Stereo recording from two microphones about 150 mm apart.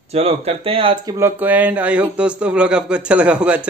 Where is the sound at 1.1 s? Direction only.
15° right (ahead or behind).